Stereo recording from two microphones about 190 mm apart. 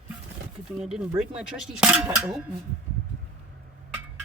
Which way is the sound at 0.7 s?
5° right (ahead or behind).